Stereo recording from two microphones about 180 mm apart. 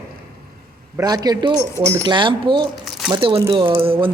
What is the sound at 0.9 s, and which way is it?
A man's voice, 20° right (ahead or behind).